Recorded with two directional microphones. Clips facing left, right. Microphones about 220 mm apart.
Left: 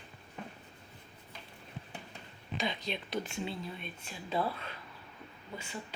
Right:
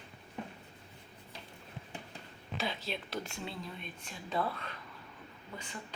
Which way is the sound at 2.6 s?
Centre (ahead or behind).